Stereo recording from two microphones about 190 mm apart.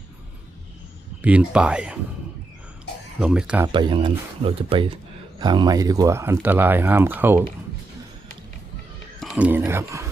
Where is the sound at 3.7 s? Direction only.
25° right (ahead or behind).